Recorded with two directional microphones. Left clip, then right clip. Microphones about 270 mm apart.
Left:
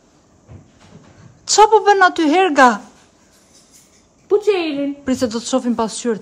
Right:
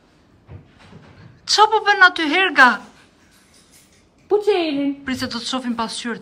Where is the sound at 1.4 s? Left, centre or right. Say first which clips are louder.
Left 4 dB; centre.